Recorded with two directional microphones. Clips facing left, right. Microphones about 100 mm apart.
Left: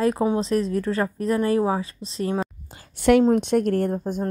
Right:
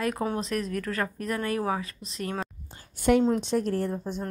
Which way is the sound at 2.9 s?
85° left.